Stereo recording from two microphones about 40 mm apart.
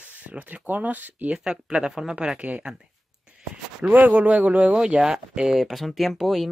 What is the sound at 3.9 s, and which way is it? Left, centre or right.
Speech, right.